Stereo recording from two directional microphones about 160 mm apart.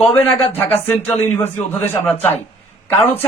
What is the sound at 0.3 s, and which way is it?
Speech, 40° left (ahead or behind).